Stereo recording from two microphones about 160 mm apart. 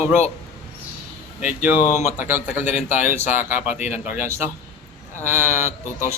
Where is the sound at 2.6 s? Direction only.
45° left (ahead or behind).